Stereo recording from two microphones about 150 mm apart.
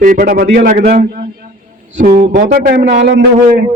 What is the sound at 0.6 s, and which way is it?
Speech, 65° right (ahead or behind).